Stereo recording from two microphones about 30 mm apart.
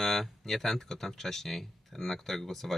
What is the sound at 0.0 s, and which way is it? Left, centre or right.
Speech, centre.